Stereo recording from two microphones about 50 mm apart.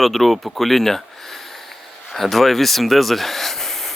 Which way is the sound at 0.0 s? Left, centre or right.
Centre.